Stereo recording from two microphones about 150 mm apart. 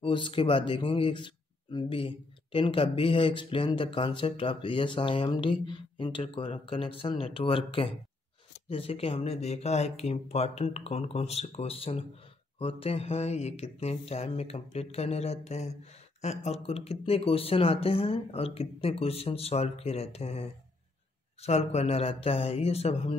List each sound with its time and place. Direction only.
0.0 s speech: 35° left (ahead or behind)